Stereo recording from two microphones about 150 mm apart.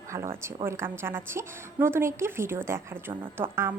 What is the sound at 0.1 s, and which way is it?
A woman's voice, 20° right (ahead or behind).